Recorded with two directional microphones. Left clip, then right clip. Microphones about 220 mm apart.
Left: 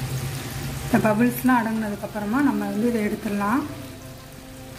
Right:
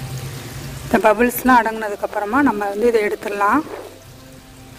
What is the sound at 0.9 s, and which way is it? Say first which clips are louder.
Speech: right 7 dB; 50° right (ahead or behind).